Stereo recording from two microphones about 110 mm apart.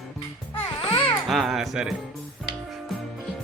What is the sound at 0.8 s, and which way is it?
Babbling, 55° left (ahead or behind).